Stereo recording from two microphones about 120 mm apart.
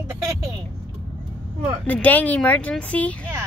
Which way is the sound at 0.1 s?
25° right (ahead or behind).